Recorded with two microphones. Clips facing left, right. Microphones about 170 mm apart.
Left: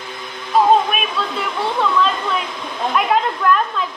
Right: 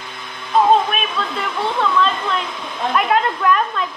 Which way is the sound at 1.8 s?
Centre (ahead or behind).